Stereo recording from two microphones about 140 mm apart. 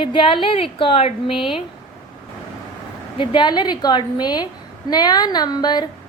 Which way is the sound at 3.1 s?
35° left (ahead or behind).